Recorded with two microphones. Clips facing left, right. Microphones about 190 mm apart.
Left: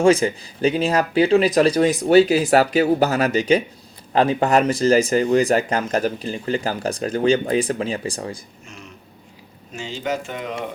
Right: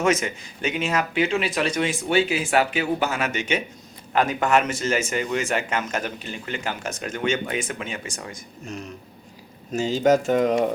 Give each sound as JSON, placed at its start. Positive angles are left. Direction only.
{"t": 0.0, "sound": "speech", "side_deg": 30}
{"t": 9.7, "sound": "speech", "side_deg": -40}